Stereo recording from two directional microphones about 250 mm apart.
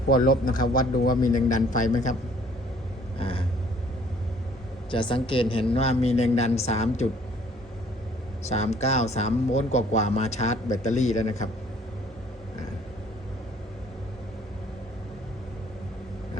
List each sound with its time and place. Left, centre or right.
0.1 s a man's voice: left
3.2 s vehicle: left
4.9 s a man's voice: centre
8.4 s a man's voice: left